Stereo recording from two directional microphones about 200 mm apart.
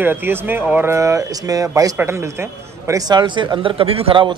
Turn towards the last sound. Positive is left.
turn(degrees=-25)  # may be behind; listen again after turning